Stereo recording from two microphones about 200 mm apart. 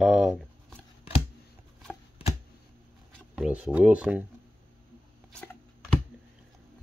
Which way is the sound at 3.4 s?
5° right (ahead or behind).